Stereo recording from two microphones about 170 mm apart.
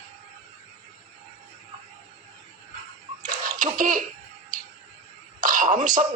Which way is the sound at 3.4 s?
50° right (ahead or behind).